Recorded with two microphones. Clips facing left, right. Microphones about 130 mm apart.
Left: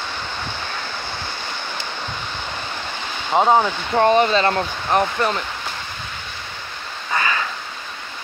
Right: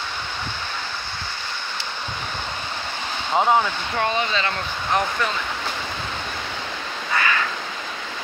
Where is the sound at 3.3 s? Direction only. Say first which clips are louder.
Left 3 dB; 20° left (ahead or behind).